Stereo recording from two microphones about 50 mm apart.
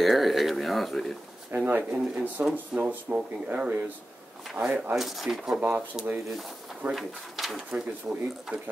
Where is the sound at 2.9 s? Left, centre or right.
Right.